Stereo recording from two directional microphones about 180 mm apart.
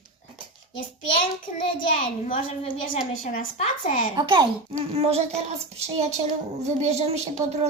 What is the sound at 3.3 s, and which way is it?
Speech, 45° left (ahead or behind).